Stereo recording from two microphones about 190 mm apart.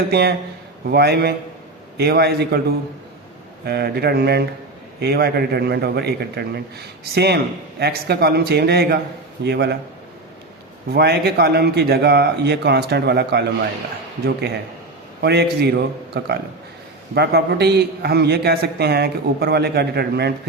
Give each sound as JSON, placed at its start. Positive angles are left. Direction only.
{"t": 0.1, "sound": "a man's voice", "side_deg": -60}
{"t": 10.9, "sound": "a man's voice", "side_deg": -60}
{"t": 15.2, "sound": "a man's voice", "side_deg": -60}